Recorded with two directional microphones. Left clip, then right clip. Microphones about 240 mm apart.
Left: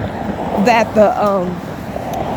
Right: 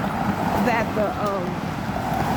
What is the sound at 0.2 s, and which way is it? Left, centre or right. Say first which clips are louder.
Vehicle: left 4 dB; right.